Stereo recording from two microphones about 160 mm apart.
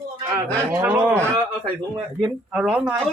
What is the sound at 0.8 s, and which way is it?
Speech, 10° right (ahead or behind).